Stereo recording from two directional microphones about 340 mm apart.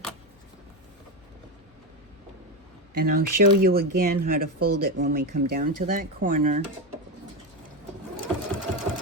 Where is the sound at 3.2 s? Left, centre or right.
Right.